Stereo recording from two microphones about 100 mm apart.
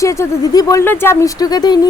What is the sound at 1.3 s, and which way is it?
Speech, 40° left (ahead or behind).